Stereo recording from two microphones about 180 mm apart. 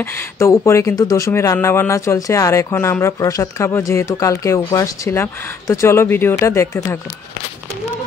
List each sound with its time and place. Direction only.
0.0 s speech: 15° left (ahead or behind)